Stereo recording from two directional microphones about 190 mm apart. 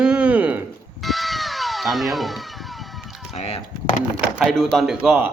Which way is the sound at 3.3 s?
35° left (ahead or behind).